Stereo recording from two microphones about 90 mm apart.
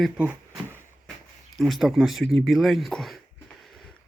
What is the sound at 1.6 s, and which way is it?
Speech, centre (ahead or behind).